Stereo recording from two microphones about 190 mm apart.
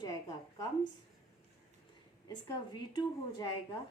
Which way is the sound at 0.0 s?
20° left (ahead or behind).